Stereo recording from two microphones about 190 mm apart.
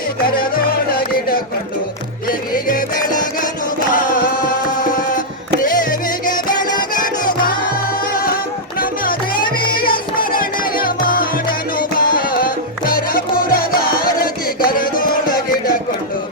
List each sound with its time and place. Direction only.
0.3 s music: 50° left (ahead or behind)
3.9 s music: 45° left (ahead or behind)
5.6 s music: 45° left (ahead or behind)
6.2 s music: 20° left (ahead or behind)
7.4 s music: 50° left (ahead or behind)